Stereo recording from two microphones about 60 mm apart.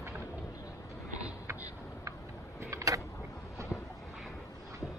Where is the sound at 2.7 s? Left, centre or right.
Right.